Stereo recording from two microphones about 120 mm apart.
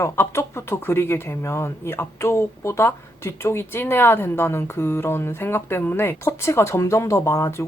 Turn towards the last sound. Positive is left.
turn(degrees=20)  # may be behind; listen again after turning